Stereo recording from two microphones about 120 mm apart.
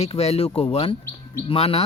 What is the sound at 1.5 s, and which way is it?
Speech, 55° left (ahead or behind).